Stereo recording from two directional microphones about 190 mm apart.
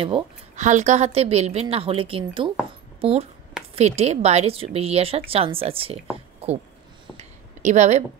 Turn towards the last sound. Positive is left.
turn(degrees=-40)  # may be behind; listen again after turning